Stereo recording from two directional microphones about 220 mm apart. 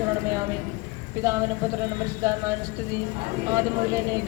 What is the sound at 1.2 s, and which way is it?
Speech, 15° right (ahead or behind).